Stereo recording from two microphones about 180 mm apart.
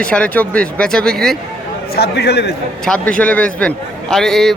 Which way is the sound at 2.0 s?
65° left (ahead or behind).